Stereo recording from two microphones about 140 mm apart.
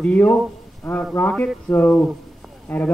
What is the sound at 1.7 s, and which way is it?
Speech, 10° left (ahead or behind).